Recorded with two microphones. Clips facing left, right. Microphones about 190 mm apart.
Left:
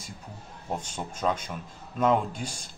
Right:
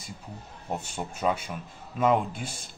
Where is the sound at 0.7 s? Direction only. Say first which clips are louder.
Right 1 dB; 5° right (ahead or behind).